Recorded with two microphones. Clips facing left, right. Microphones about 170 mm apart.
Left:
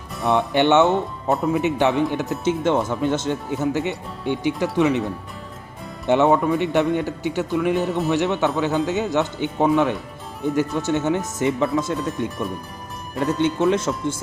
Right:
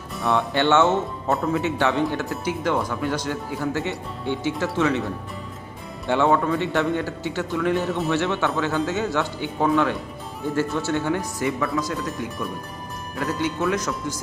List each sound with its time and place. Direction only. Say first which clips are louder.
0.3 s speech: left 3 dB; 20° left (ahead or behind)
6.1 s speech: left 3 dB; 20° left (ahead or behind)